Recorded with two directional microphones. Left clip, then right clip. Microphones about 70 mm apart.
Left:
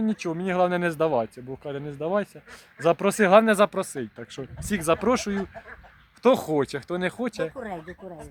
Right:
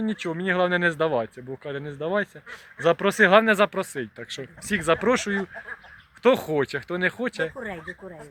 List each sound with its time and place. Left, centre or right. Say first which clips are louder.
0.0 s speech: even; left
4.8 s speech: right 1 dB; centre
6.2 s speech: even; left